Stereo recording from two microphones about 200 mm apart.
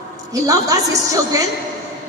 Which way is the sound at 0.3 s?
15° right (ahead or behind).